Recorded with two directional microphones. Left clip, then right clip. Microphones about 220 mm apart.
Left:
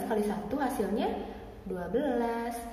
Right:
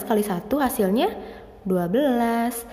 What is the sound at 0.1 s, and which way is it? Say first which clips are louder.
A woman's voice: right 10 dB; 50° right (ahead or behind).